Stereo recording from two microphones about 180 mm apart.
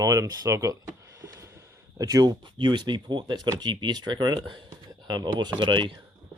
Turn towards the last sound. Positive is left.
turn(degrees=-25)  # may be behind; listen again after turning